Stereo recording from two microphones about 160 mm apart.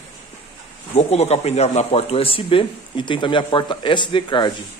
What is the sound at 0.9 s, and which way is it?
Speech, 40° left (ahead or behind).